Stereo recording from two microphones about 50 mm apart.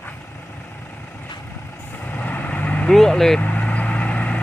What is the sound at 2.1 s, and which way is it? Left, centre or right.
Vehicle, left.